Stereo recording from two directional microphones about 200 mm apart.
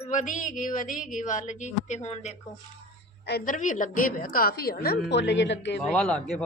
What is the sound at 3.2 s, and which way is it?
A woman's voice, 50° left (ahead or behind).